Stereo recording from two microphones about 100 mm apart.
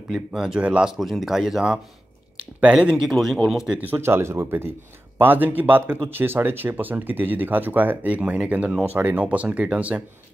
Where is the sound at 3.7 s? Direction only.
15° right (ahead or behind).